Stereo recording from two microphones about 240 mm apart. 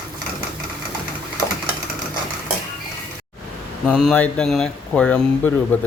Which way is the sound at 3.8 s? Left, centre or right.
Centre.